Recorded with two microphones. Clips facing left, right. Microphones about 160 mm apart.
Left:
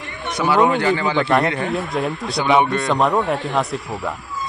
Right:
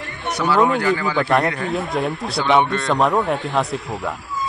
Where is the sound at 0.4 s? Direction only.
15° left (ahead or behind).